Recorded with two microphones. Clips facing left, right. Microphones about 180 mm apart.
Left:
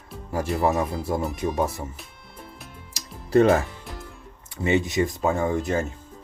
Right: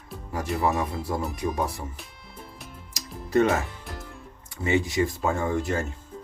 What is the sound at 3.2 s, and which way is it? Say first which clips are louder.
Music: left 4 dB; 30° left (ahead or behind).